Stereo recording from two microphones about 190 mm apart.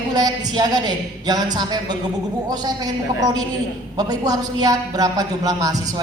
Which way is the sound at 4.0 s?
20° right (ahead or behind).